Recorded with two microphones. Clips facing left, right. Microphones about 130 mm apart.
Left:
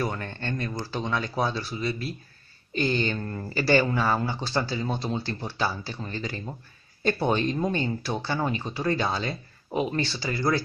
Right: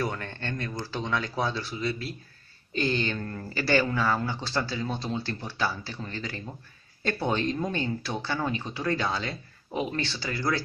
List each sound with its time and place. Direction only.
0.0 s speech: 10° left (ahead or behind)